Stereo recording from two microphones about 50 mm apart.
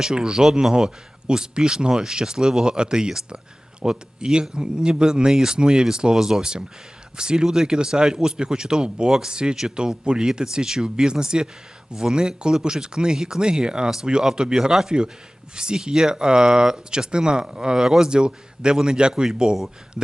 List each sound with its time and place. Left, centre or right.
0.0 s speech: centre
18.1 s speech: centre